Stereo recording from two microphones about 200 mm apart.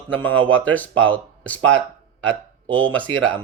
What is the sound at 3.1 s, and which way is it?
Speech, 80° right.